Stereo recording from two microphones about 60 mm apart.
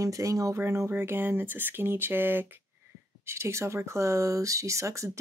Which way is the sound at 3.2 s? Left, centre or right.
Right.